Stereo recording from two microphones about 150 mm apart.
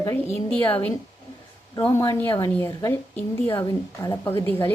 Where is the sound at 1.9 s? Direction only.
20° left (ahead or behind).